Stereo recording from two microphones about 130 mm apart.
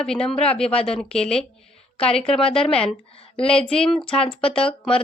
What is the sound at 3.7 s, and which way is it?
Speech, 5° left (ahead or behind).